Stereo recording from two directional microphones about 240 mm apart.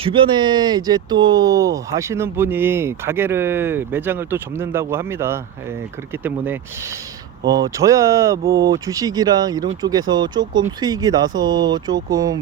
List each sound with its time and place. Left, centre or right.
0.0 s speech: right